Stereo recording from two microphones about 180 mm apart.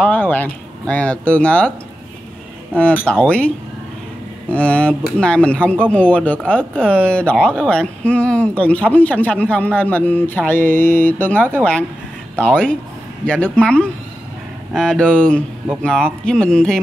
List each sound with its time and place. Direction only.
0.0 s speech: 10° left (ahead or behind)
2.7 s speech: 5° left (ahead or behind)